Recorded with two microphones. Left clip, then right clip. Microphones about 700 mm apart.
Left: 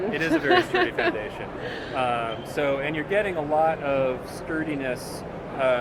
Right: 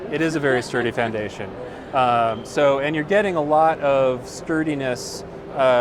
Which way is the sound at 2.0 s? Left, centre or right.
Right.